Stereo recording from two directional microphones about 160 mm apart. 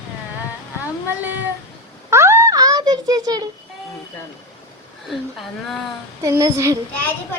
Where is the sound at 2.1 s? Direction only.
15° right (ahead or behind).